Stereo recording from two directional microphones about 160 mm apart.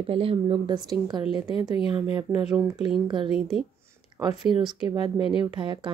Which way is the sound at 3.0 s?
30° right (ahead or behind).